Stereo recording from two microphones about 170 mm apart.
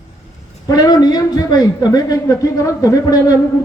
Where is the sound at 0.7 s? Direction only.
25° left (ahead or behind).